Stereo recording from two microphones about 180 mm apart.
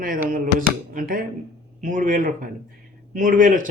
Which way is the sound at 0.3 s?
50° right (ahead or behind).